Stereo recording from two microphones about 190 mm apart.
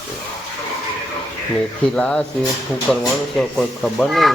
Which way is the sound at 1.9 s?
5° left (ahead or behind).